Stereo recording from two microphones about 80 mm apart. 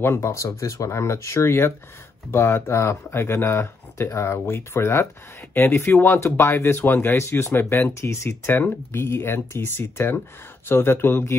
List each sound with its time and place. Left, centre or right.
0.0 s speech: left